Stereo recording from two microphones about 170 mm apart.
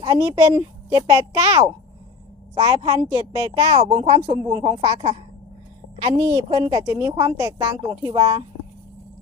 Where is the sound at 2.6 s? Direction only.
25° right (ahead or behind).